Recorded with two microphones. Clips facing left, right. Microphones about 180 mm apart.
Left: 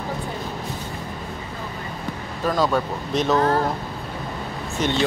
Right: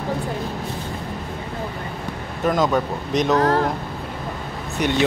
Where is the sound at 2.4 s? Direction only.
20° right (ahead or behind).